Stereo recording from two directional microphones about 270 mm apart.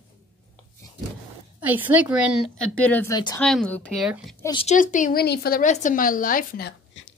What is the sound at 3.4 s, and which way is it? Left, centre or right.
Speech, centre.